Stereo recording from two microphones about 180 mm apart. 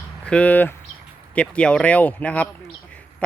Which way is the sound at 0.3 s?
5° left (ahead or behind).